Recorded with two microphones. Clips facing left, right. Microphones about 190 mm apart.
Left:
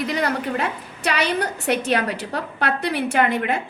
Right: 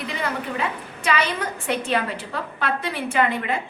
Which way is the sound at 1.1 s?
70° left (ahead or behind).